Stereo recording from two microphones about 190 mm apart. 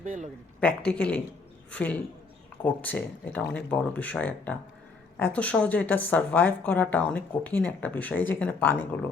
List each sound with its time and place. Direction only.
0.0 s speech: 40° right (ahead or behind)
0.6 s a woman's voice: 5° left (ahead or behind)